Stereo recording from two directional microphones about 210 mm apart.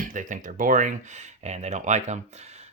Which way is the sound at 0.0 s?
40° right (ahead or behind).